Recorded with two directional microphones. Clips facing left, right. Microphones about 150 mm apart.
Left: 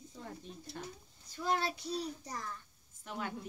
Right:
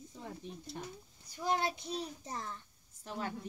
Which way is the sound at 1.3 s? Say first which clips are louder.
Right 1 dB; 20° right (ahead or behind).